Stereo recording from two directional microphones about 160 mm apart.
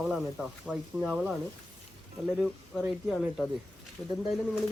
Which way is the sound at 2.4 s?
5° right (ahead or behind).